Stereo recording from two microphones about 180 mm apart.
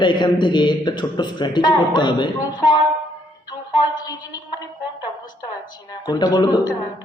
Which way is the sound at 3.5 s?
25° left (ahead or behind).